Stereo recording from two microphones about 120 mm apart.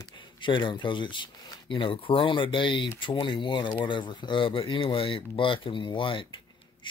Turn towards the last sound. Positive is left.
turn(degrees=45)  # may be behind; listen again after turning